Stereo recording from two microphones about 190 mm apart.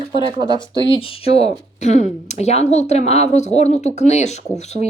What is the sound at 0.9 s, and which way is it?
A woman's voice, 30° left (ahead or behind).